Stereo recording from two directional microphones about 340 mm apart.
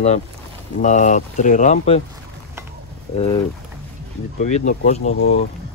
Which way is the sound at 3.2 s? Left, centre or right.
Centre.